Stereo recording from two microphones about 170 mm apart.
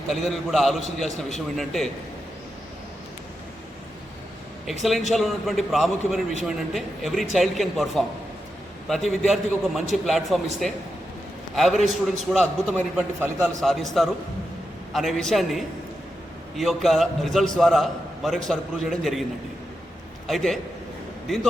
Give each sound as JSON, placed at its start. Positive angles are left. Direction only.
{"t": 0.1, "sound": "a man's voice", "side_deg": 0}
{"t": 4.6, "sound": "a man's voice", "side_deg": 0}
{"t": 13.0, "sound": "a man's voice", "side_deg": -15}
{"t": 13.6, "sound": "a man's voice", "side_deg": 0}
{"t": 20.2, "sound": "a man's voice", "side_deg": 0}